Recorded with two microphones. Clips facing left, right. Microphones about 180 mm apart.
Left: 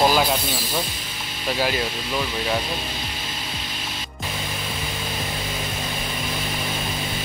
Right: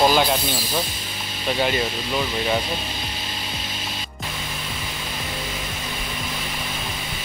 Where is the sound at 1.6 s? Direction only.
Centre (ahead or behind).